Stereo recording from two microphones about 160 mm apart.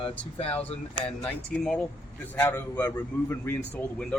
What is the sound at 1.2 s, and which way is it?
A man's voice, 5° left (ahead or behind).